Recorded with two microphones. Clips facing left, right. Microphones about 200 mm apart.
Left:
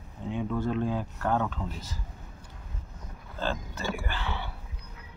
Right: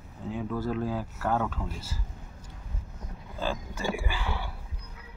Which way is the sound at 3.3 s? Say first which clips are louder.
Even; 10° right (ahead or behind).